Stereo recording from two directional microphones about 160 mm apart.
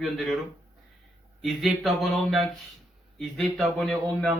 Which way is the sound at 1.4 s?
Centre (ahead or behind).